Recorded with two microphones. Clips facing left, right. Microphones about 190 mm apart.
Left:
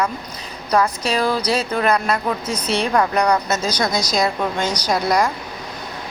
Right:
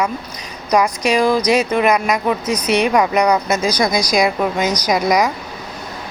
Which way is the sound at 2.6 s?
30° left (ahead or behind).